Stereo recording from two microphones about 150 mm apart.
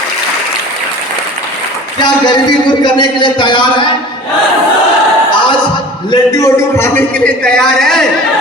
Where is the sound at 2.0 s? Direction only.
30° left (ahead or behind).